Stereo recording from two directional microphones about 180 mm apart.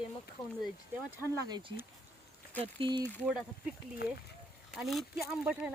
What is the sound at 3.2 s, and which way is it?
Speech, centre (ahead or behind).